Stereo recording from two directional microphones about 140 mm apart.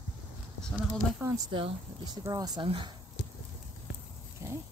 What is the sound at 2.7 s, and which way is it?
Speech, 40° right (ahead or behind).